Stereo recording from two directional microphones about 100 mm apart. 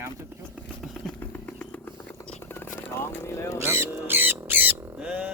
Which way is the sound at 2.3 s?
20° left (ahead or behind).